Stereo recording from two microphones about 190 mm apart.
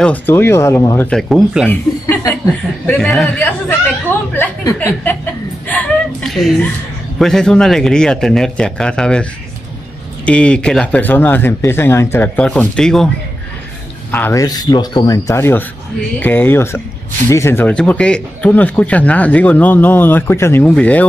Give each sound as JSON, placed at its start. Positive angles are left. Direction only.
{"t": 0.0, "sound": "speech", "side_deg": 10}
{"t": 1.7, "sound": "chuckle", "side_deg": 10}
{"t": 2.9, "sound": "speech", "side_deg": 0}
{"t": 5.7, "sound": "a sound", "side_deg": 5}
{"t": 7.2, "sound": "a man's voice", "side_deg": 5}
{"t": 14.1, "sound": "speech", "side_deg": 15}